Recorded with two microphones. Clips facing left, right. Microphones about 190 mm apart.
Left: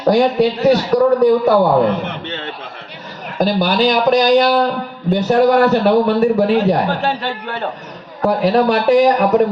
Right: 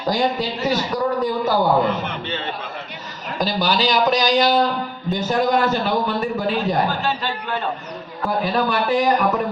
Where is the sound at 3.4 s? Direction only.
55° left (ahead or behind).